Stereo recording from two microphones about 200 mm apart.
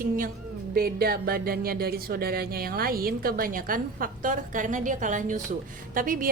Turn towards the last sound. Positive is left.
turn(degrees=-45)  # may be behind; listen again after turning